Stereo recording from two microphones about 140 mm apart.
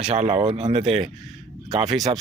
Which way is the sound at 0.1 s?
50° right (ahead or behind).